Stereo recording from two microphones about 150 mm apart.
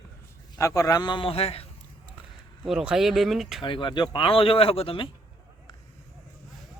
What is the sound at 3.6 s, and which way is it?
Speech, 30° left (ahead or behind).